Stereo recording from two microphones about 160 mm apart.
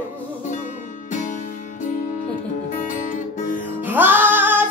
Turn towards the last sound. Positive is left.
turn(degrees=-10)  # may be behind; listen again after turning